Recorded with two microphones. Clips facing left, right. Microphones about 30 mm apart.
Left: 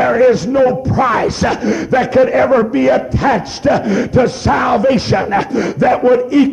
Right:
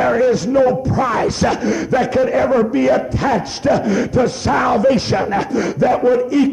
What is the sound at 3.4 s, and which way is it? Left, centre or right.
Speech, centre.